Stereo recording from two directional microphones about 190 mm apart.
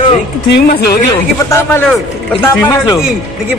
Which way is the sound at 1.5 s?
10° left (ahead or behind).